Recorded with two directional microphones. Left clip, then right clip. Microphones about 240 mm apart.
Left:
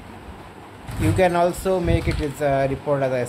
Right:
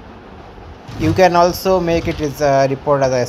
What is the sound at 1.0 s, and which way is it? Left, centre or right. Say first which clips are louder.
Speech: right 7 dB; centre.